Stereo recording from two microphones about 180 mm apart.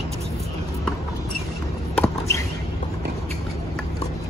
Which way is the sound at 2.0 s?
15° left (ahead or behind).